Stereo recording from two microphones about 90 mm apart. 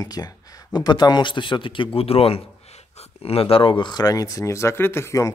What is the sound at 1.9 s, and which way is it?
Speech, 90° left.